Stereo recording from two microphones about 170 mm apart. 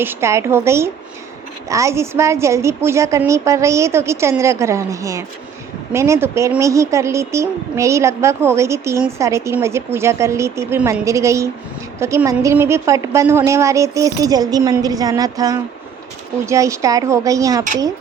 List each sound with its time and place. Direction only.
0.0 s a woman's voice: 15° right (ahead or behind)